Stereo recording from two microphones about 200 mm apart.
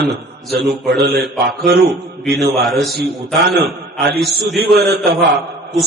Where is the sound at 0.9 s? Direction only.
50° right (ahead or behind).